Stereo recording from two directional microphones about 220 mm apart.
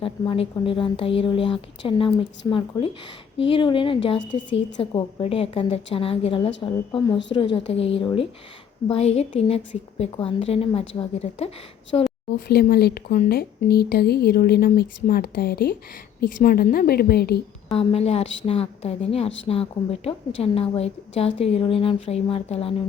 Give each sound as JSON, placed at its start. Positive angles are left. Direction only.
{"t": 0.0, "sound": "a woman's voice", "side_deg": 25}
{"t": 12.5, "sound": "a woman's voice", "side_deg": 45}
{"t": 17.7, "sound": "a woman's voice", "side_deg": 25}